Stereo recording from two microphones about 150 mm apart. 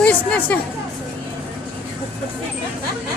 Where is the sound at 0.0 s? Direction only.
10° left (ahead or behind).